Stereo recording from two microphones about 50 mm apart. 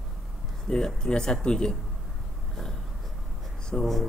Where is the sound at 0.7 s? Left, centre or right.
Centre.